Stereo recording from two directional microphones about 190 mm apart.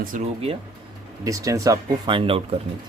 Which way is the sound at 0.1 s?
40° right (ahead or behind).